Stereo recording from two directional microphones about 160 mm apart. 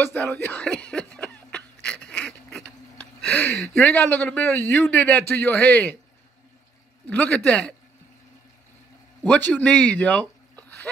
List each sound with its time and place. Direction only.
0.0 s a sound: 10° left (ahead or behind)
3.6 s a man's voice: 10° left (ahead or behind)
7.1 s a man's voice: 10° left (ahead or behind)
9.2 s speech: 10° left (ahead or behind)